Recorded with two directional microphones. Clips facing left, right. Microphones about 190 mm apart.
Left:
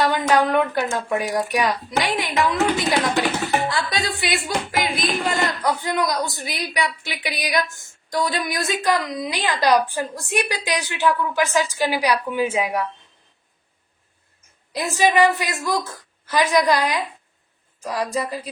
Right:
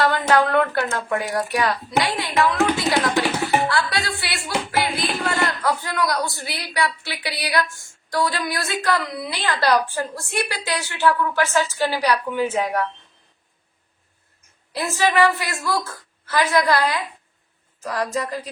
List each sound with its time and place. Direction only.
0.0 s a woman's voice: 15° left (ahead or behind)
14.7 s a woman's voice: 15° left (ahead or behind)